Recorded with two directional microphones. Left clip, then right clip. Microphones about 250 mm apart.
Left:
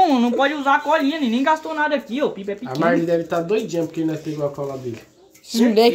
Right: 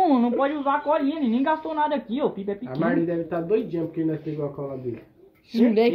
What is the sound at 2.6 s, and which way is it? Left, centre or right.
Speech, left.